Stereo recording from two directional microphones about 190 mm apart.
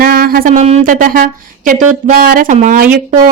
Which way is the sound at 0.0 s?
50° right (ahead or behind).